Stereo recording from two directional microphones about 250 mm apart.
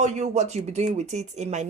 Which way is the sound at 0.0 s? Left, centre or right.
Right.